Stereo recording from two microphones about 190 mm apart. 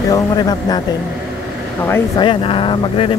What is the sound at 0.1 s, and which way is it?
Speech, 20° left (ahead or behind).